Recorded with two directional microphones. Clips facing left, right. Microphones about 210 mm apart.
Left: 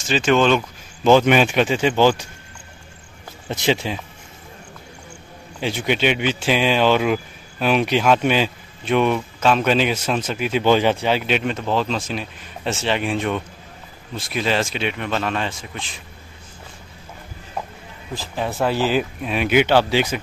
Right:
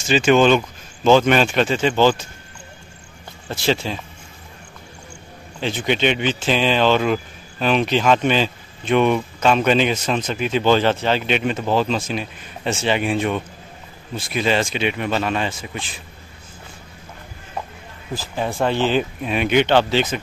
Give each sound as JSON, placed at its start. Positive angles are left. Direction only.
{"t": 0.1, "sound": "speech", "side_deg": -5}
{"t": 1.0, "sound": "speech", "side_deg": 15}
{"t": 3.4, "sound": "speech", "side_deg": 20}
{"t": 5.6, "sound": "speech", "side_deg": 10}
{"t": 18.1, "sound": "speech", "side_deg": 0}